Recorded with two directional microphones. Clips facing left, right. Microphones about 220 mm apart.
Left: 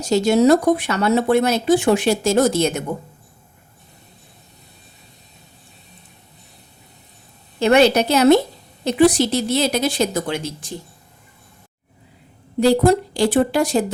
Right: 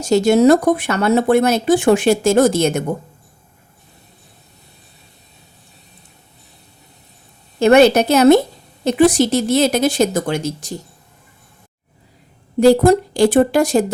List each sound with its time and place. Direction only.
0.0 s speech: 50° right (ahead or behind)
7.6 s speech: 50° right (ahead or behind)
12.5 s speech: 50° right (ahead or behind)